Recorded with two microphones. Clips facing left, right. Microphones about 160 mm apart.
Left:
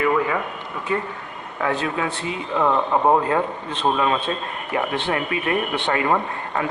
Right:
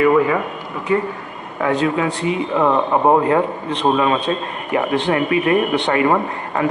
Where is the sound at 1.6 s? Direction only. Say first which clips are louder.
Right 6 dB; 20° right (ahead or behind).